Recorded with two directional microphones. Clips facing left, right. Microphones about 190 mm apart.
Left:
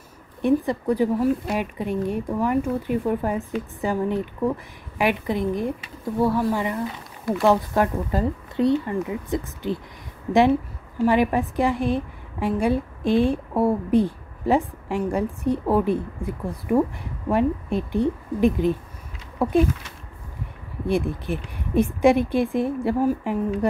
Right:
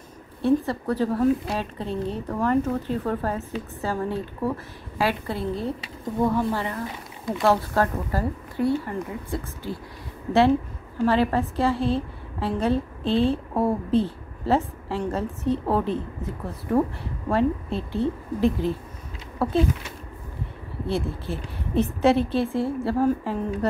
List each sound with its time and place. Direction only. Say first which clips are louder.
0.4 s a woman's voice: left 1 dB; 15° left (ahead or behind)
11.1 s a woman's voice: left 2 dB; 15° left (ahead or behind)
20.8 s a woman's voice: left 4 dB; 15° left (ahead or behind)